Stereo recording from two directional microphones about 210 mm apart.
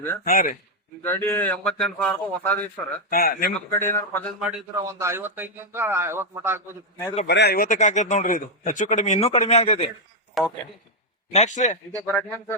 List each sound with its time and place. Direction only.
0.3 s speech: 40° left (ahead or behind)
1.0 s speech: 10° left (ahead or behind)
3.1 s a man's voice: 45° left (ahead or behind)
3.5 s speech: 10° left (ahead or behind)
4.4 s a man's voice: 5° right (ahead or behind)
7.3 s speech: 50° left (ahead or behind); by 9.9 s 30° left (ahead or behind)
10.4 s a man's voice: centre (ahead or behind)
11.3 s speech: 35° left (ahead or behind)
11.9 s speech: 10° left (ahead or behind)